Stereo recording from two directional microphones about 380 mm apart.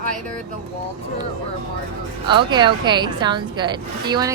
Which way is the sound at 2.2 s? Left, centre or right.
Centre.